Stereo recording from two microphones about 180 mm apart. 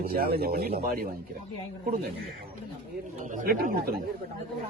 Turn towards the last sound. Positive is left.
turn(degrees=-55)  # may be behind; listen again after turning